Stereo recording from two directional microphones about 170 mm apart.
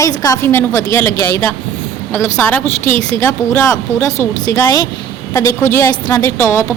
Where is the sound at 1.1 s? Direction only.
60° left (ahead or behind).